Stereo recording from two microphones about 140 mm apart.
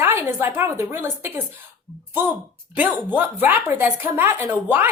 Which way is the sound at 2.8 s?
15° right (ahead or behind).